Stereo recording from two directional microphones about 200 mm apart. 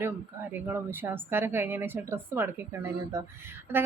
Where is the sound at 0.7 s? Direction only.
10° right (ahead or behind).